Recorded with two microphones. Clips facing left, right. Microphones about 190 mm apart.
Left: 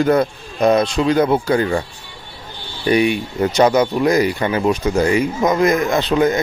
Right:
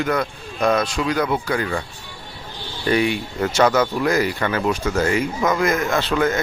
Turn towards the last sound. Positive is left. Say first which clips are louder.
# left 4 dB
turn(degrees=15)  # may be behind; listen again after turning